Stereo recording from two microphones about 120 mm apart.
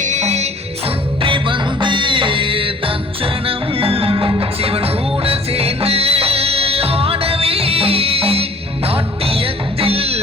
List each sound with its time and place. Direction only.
0.0 s music: 80° right
1.2 s music: 45° right (ahead or behind)